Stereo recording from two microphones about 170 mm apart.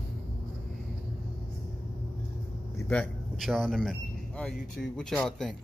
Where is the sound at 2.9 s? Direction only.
5° left (ahead or behind).